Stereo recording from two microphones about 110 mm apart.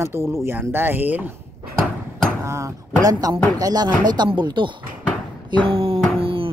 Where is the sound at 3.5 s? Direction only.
35° right (ahead or behind).